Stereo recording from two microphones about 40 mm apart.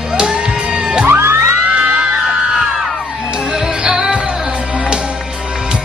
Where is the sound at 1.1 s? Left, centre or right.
Right.